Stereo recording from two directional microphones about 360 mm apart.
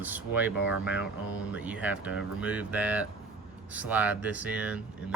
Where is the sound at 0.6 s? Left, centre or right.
Left.